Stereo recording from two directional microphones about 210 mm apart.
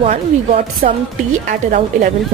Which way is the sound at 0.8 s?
40° right (ahead or behind).